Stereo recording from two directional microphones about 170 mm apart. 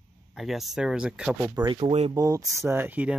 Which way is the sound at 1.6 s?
30° right (ahead or behind).